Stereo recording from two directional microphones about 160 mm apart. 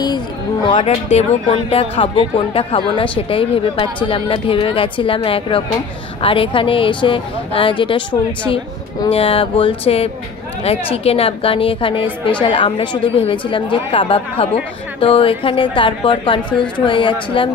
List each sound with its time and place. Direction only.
0.7 s a woman's voice: 35° left (ahead or behind)